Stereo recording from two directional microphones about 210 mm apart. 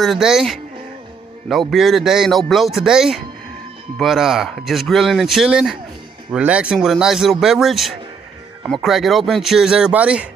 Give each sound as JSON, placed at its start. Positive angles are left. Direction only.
{"t": 0.0, "sound": "speech", "side_deg": 0}